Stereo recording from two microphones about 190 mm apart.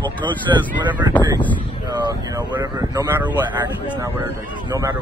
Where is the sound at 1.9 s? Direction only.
25° right (ahead or behind).